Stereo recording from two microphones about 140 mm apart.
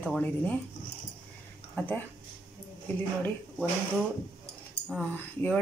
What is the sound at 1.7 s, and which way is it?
Speech, 10° left (ahead or behind).